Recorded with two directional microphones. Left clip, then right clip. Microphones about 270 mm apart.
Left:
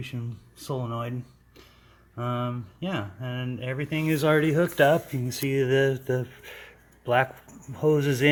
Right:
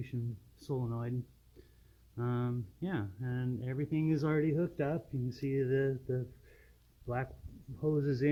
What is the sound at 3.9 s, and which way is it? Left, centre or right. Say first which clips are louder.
Speech: left 10 dB; centre.